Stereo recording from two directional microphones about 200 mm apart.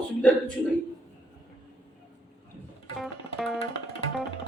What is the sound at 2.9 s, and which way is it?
Music, centre (ahead or behind).